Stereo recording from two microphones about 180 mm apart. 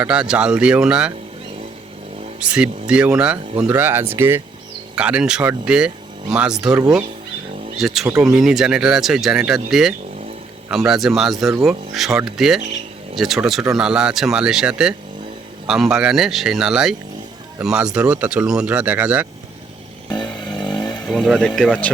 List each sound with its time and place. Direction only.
0.0 s speech: 5° right (ahead or behind)
2.4 s speech: 5° right (ahead or behind)
20.1 s motorcycle: 25° left (ahead or behind)
20.5 s vehicle: 25° left (ahead or behind)
21.4 s speech: 5° left (ahead or behind)